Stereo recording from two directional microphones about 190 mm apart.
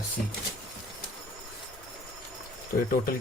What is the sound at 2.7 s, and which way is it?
Speech, 50° left (ahead or behind).